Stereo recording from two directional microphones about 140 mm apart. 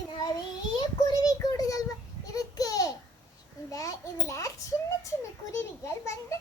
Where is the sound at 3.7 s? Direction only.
25° left (ahead or behind).